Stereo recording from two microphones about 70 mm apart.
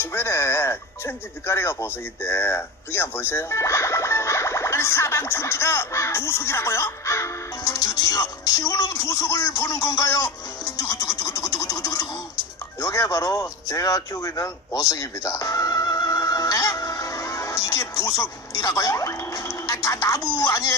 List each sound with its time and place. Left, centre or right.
0.0 s speech: left
7.6 s speech: left
12.8 s a sound: left